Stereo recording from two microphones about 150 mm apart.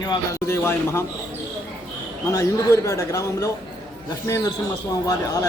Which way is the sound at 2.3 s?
20° left (ahead or behind).